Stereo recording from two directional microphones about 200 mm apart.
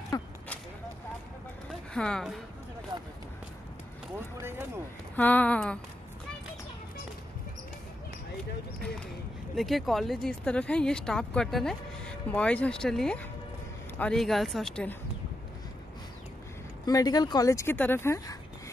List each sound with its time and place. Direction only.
0.1 s speech: 15° left (ahead or behind)
1.7 s speech: 5° left (ahead or behind)
4.4 s speech: 10° right (ahead or behind)
5.1 s speech: 10° left (ahead or behind)
9.6 s speech: centre (ahead or behind)
16.8 s speech: 20° left (ahead or behind)